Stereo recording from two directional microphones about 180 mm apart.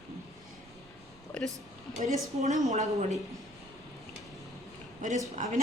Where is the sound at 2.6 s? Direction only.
40° right (ahead or behind).